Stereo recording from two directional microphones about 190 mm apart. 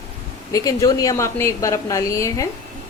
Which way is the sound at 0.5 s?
20° left (ahead or behind).